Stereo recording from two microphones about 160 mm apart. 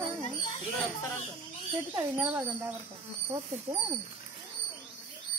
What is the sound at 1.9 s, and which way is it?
Speech, 10° right (ahead or behind).